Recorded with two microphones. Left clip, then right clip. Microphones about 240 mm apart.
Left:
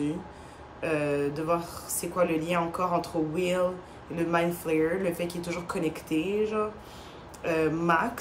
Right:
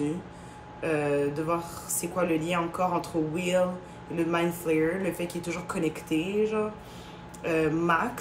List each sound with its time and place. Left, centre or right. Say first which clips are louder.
0.7 s speech: right 1 dB; centre